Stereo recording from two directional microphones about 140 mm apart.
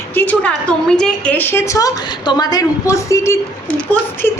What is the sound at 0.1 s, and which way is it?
A woman's voice, 10° left (ahead or behind).